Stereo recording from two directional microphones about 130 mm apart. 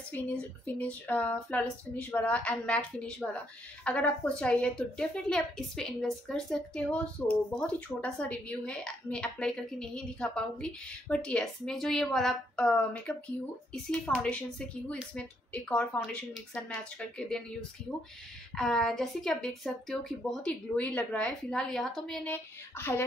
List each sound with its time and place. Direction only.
0.7 s a woman's voice: 10° left (ahead or behind)
18.5 s a woman's voice: 5° left (ahead or behind)
22.3 s a woman's voice: 15° left (ahead or behind)